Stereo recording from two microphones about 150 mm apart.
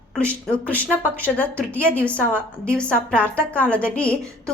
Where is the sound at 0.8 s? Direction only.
10° left (ahead or behind).